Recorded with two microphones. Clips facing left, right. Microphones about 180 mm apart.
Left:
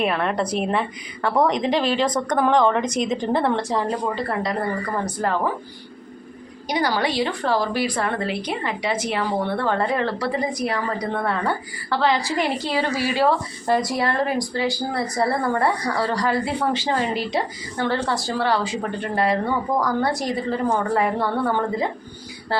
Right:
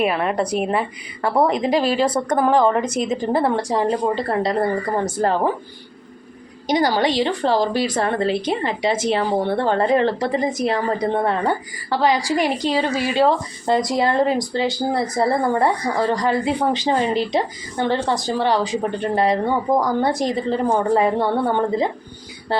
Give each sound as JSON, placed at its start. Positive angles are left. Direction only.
{"t": 0.0, "sound": "a woman's voice", "side_deg": -10}
{"t": 4.0, "sound": "speech", "side_deg": -30}
{"t": 6.7, "sound": "speech", "side_deg": -40}
{"t": 7.2, "sound": "a woman's voice", "side_deg": -25}
{"t": 7.9, "sound": "a woman's voice", "side_deg": -35}